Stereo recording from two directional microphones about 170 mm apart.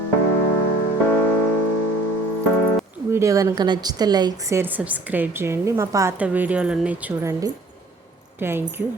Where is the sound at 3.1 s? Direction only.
20° right (ahead or behind).